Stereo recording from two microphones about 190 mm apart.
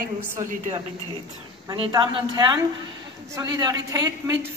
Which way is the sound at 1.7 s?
20° right (ahead or behind).